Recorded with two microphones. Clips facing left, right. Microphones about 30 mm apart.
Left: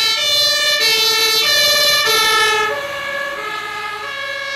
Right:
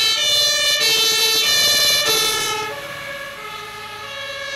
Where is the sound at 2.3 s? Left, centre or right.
Left.